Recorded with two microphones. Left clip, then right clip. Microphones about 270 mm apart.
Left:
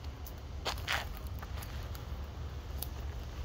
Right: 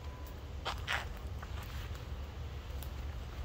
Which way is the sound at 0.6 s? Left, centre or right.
Left.